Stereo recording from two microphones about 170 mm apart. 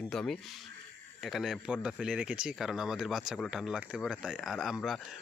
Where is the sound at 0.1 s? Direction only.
Centre (ahead or behind).